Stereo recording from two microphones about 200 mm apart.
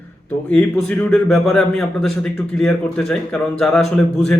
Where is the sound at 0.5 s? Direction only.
5° left (ahead or behind).